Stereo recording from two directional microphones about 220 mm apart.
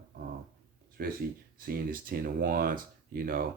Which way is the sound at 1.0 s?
40° right (ahead or behind).